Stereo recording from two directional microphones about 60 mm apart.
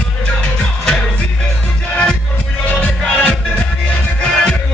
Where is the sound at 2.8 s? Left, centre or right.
Centre.